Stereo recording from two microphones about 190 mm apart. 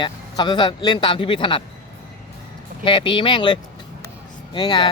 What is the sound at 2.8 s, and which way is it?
Speech, 25° left (ahead or behind).